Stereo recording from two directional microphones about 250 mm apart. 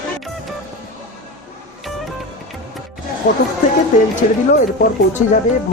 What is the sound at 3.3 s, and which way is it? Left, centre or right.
Speech, left.